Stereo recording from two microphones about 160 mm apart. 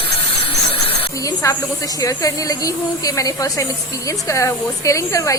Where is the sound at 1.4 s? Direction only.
20° left (ahead or behind).